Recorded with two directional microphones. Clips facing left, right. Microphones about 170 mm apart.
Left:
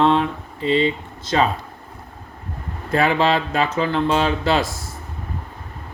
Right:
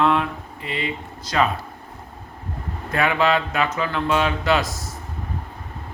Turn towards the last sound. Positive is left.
turn(degrees=30)  # may be behind; listen again after turning